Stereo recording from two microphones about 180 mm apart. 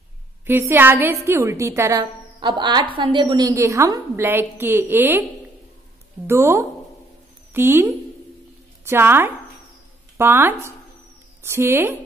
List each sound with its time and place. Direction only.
0.5 s a woman's voice: 10° right (ahead or behind)
6.2 s a woman's voice: 15° right (ahead or behind)